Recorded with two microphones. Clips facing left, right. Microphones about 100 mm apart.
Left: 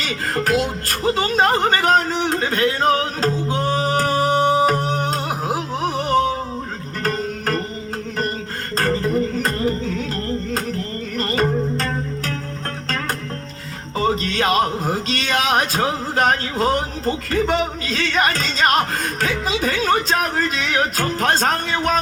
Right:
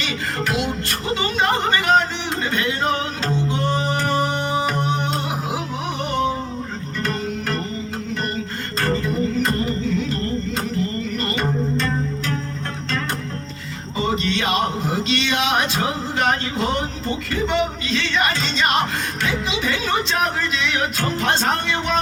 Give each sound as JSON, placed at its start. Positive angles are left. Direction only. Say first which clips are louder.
{"t": 0.0, "sound": "music", "louder": "left 2 dB", "side_deg": 40}
{"t": 8.8, "sound": "music", "louder": "left 2 dB", "side_deg": 40}
{"t": 14.1, "sound": "speech", "louder": "left 1 dB", "side_deg": 45}